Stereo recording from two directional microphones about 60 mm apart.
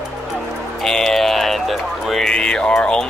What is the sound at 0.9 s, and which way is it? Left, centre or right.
Music, centre.